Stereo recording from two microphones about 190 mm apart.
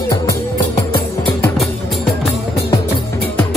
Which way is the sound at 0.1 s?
20° left (ahead or behind).